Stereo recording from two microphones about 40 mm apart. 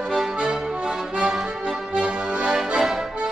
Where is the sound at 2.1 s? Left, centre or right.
Right.